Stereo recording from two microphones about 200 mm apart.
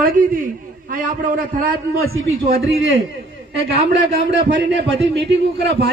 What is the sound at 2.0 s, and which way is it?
Speech, 50° right (ahead or behind).